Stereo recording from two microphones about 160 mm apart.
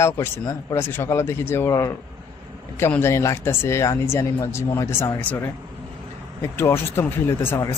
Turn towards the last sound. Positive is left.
turn(degrees=15)  # may be behind; listen again after turning